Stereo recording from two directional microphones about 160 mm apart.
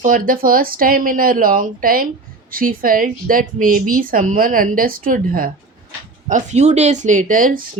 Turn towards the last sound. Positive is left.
turn(degrees=-60)  # may be behind; listen again after turning